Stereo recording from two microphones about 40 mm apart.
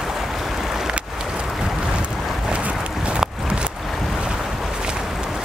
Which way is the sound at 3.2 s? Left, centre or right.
Right.